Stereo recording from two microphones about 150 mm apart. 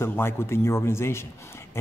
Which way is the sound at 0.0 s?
15° left (ahead or behind).